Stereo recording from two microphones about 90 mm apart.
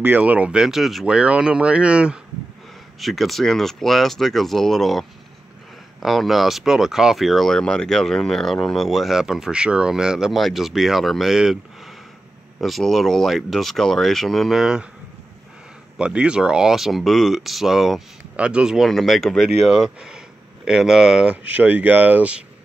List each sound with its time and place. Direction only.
0.0 s speech: 20° right (ahead or behind)
3.0 s speech: centre (ahead or behind)
16.0 s speech: 10° right (ahead or behind)
21.5 s speech: 20° right (ahead or behind)